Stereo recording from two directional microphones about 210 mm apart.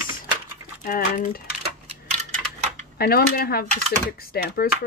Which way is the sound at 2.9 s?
45° left (ahead or behind).